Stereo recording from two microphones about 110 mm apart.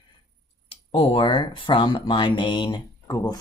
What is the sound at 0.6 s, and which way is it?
Speech, 60° left (ahead or behind).